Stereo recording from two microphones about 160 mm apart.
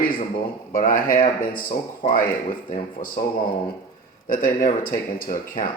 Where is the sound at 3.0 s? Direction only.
45° left (ahead or behind).